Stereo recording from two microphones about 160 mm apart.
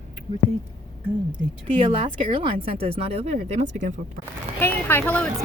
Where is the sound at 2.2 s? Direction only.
30° right (ahead or behind).